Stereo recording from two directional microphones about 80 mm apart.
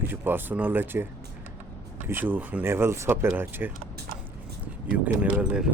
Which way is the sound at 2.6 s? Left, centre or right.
Right.